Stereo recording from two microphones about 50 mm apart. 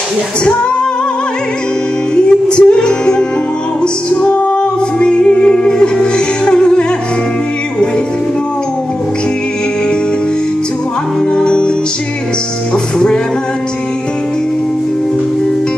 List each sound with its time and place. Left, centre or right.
2.1 s music: centre
3.8 s music: left
11.3 s music: centre